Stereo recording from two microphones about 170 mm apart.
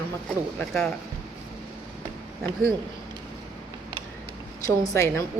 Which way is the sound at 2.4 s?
5° right (ahead or behind).